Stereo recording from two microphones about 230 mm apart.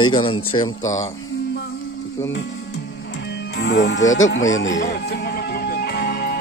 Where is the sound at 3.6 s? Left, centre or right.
Left.